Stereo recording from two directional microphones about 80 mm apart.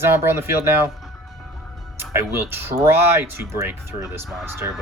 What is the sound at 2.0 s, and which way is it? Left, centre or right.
Speech, right.